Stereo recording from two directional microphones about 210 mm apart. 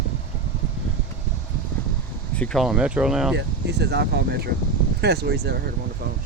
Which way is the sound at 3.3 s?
55° right (ahead or behind).